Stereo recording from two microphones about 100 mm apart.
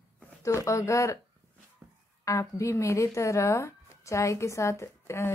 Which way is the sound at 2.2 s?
30° left (ahead or behind).